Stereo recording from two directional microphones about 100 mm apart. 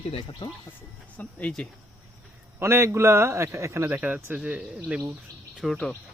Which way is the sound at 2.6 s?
25° right (ahead or behind).